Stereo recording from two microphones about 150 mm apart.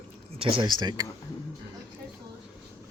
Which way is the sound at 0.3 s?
35° right (ahead or behind).